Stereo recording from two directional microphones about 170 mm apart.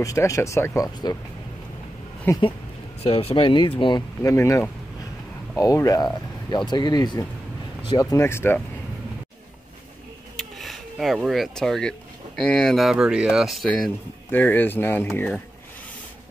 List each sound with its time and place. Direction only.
0.0 s speech: 20° left (ahead or behind)
2.3 s speech: 15° left (ahead or behind)
3.0 s speech: 40° left (ahead or behind)
4.2 s speech: 15° left (ahead or behind)
10.3 s a sound: centre (ahead or behind)
12.4 s speech: 5° left (ahead or behind)